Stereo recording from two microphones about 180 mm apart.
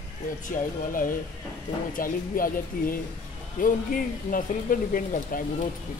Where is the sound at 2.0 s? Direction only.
50° left (ahead or behind).